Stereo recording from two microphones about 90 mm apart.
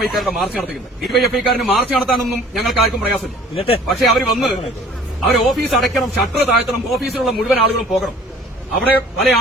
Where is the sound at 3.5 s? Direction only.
90° left.